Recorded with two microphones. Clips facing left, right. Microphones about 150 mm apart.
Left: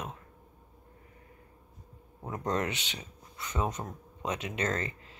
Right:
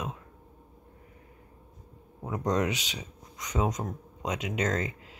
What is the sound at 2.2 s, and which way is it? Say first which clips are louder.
Speech: right 4 dB; 15° right (ahead or behind).